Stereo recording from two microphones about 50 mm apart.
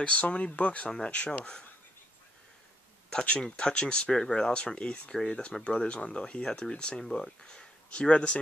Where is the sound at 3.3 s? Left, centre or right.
Centre.